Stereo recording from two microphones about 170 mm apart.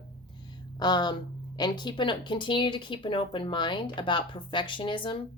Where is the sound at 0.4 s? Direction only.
25° left (ahead or behind).